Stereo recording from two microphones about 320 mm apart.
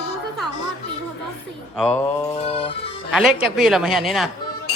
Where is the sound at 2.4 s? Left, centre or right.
Centre.